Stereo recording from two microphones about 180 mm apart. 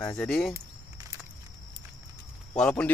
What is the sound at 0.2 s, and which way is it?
Speech, 5° left (ahead or behind).